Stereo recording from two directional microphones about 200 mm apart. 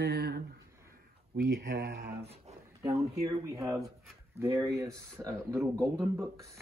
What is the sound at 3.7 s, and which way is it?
Speech, centre (ahead or behind).